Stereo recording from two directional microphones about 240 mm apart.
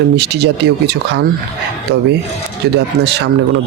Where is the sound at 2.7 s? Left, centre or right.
Right.